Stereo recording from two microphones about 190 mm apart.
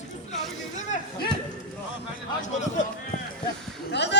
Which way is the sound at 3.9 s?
65° left (ahead or behind).